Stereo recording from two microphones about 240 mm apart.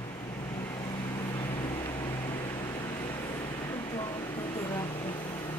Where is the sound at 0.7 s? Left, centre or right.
Centre.